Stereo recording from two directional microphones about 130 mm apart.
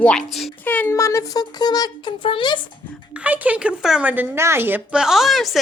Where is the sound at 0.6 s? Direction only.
15° left (ahead or behind); by 2.6 s 40° left (ahead or behind).